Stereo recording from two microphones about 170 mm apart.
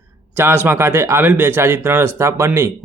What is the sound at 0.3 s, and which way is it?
A man's voice, 10° right (ahead or behind).